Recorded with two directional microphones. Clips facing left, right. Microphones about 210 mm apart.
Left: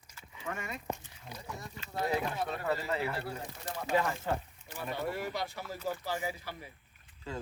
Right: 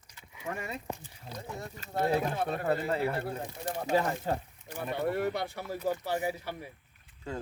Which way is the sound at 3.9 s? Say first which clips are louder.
Right 2 dB; 35° right (ahead or behind).